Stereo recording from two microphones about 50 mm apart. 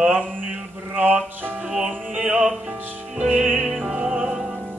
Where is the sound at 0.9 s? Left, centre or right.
Right.